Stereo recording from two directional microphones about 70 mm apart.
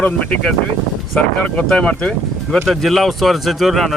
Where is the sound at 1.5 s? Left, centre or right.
Centre.